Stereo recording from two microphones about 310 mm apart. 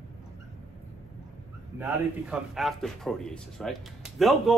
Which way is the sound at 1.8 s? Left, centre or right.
Centre.